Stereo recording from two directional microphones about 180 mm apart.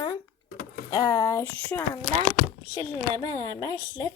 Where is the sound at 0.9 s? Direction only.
20° left (ahead or behind).